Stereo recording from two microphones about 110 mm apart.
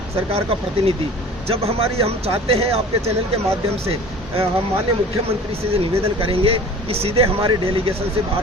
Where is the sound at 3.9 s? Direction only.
60° right (ahead or behind).